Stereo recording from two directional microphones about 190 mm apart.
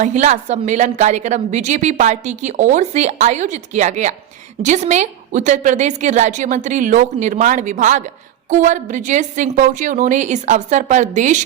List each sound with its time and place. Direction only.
0.0 s a woman's voice: 40° right (ahead or behind)